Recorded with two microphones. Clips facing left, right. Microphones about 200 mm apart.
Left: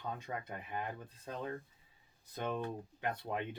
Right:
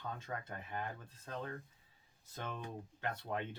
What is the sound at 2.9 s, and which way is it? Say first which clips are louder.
Speech: left 2 dB; 35° left (ahead or behind).